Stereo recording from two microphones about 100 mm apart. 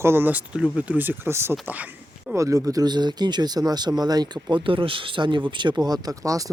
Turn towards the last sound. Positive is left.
turn(degrees=-35)  # may be behind; listen again after turning